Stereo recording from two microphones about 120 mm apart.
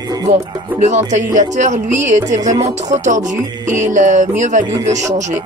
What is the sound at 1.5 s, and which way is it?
Speech, 80° right.